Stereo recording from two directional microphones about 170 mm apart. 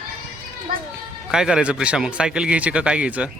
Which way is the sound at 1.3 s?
5° right (ahead or behind).